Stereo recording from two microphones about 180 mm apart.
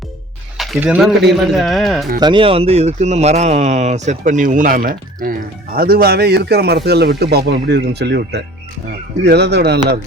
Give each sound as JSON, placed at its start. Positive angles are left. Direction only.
{"t": 0.5, "sound": "a sound", "side_deg": 0}
{"t": 0.8, "sound": "speech", "side_deg": -5}
{"t": 2.2, "sound": "speech", "side_deg": -30}